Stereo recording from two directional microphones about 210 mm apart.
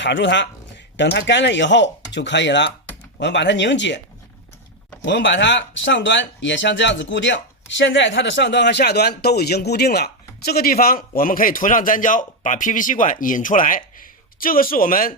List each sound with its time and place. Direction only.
0.0 s speech: 55° left (ahead or behind)
5.0 s speech: 60° left (ahead or behind); by 15.1 s 40° left (ahead or behind)